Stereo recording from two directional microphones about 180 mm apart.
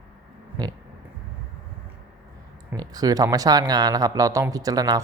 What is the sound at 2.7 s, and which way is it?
Speech, 20° right (ahead or behind).